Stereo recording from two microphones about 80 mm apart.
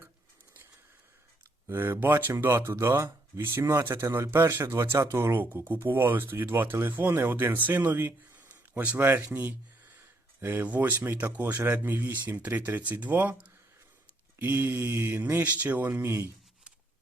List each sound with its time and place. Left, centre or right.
1.6 s speech: right
15.9 s speech: right